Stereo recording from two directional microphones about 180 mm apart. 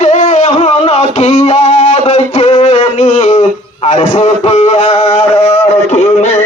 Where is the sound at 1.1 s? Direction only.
40° left (ahead or behind).